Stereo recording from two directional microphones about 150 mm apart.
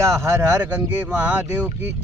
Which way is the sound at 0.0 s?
20° right (ahead or behind).